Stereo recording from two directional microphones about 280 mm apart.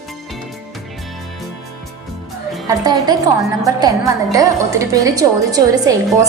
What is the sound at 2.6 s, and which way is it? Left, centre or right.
A woman's voice, centre.